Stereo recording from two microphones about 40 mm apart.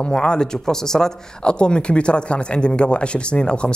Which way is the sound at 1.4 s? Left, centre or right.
Left.